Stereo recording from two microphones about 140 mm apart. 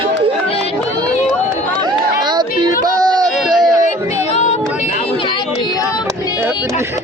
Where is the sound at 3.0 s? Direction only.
30° right (ahead or behind).